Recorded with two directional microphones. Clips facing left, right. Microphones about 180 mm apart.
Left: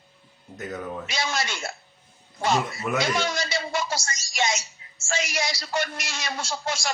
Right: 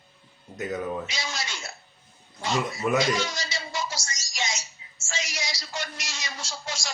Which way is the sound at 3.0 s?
55° left (ahead or behind).